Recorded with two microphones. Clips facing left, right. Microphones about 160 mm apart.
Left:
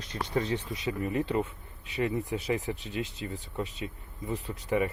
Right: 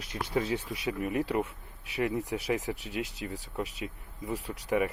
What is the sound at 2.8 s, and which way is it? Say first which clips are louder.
Speech: even; 80° right.